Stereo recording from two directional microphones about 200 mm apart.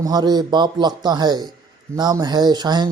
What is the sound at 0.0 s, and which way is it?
A man's voice, 20° right (ahead or behind).